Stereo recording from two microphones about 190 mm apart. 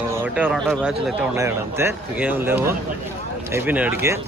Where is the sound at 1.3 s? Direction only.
15° right (ahead or behind).